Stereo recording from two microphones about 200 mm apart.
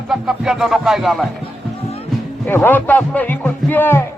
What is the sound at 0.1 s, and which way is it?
Music, centre (ahead or behind).